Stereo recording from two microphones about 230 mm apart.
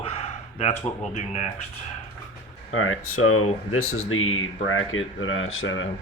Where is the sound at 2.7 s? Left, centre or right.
Left.